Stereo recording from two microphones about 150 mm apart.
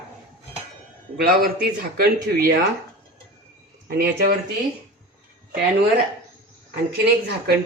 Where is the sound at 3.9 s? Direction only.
90° right.